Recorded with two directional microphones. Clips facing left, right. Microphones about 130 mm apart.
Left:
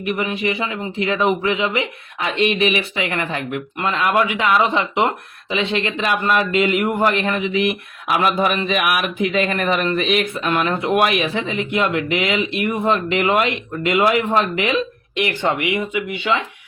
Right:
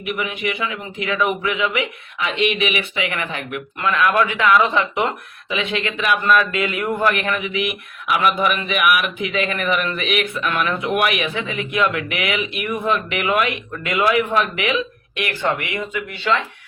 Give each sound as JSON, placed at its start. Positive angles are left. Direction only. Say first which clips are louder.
{"t": 0.0, "sound": "speech", "louder": "left 3 dB", "side_deg": 30}
{"t": 2.1, "sound": "speech", "louder": "left 2 dB", "side_deg": 40}
{"t": 3.8, "sound": "speech", "louder": "right 1 dB", "side_deg": 20}
{"t": 5.5, "sound": "speech", "louder": "left 2 dB", "side_deg": 30}
{"t": 7.5, "sound": "speech", "louder": "left 4 dB", "side_deg": 35}
{"t": 10.4, "sound": "speech", "louder": "left 2 dB", "side_deg": 25}
{"t": 15.1, "sound": "speech", "louder": "left 2 dB", "side_deg": 20}